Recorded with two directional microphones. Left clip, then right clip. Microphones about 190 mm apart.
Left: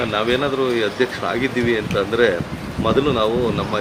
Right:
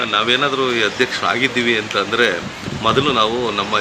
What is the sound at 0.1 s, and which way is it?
Speech, 5° left (ahead or behind).